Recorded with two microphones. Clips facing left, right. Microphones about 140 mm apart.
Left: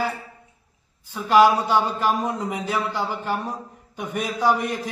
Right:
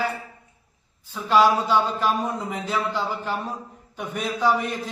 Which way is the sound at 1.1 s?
10° left (ahead or behind).